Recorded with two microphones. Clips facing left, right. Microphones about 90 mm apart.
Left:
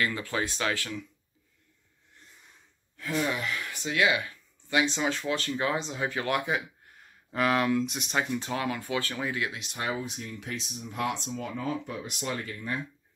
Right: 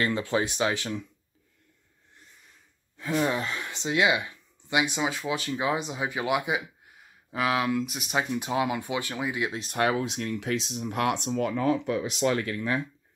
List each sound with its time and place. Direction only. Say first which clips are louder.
0.0 s speech: right 4 dB; 25° right (ahead or behind)
3.2 s speech: right 3 dB; 30° right (ahead or behind)
9.7 s speech: right 7 dB; 65° right (ahead or behind); by 12.8 s 90° right